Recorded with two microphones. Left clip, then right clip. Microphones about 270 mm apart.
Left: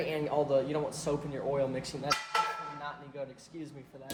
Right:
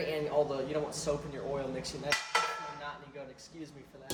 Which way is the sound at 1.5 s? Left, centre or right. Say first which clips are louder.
Left 5 dB; centre.